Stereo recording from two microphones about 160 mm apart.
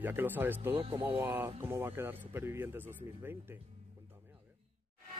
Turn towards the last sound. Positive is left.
turn(degrees=-15)  # may be behind; listen again after turning